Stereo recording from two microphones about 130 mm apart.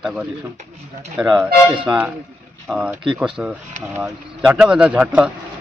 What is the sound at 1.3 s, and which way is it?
Speech, 10° right (ahead or behind).